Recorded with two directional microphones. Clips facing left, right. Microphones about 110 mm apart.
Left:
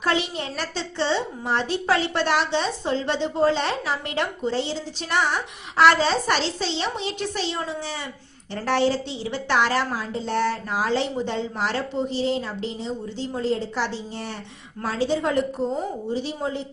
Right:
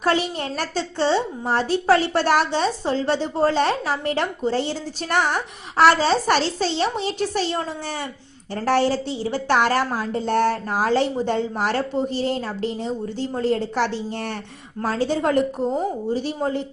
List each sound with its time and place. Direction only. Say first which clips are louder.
0.0 s a woman's voice: right 3 dB; 45° right (ahead or behind)